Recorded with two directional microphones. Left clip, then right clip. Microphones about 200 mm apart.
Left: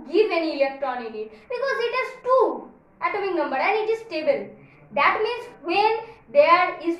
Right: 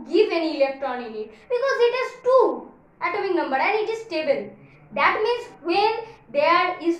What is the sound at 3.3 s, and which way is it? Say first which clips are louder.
A woman's voice: right 2 dB; 15° right (ahead or behind).